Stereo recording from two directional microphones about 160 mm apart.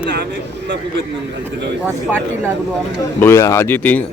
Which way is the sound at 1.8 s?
10° right (ahead or behind).